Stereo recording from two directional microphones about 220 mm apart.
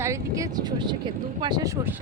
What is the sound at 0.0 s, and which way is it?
Speech, 15° right (ahead or behind).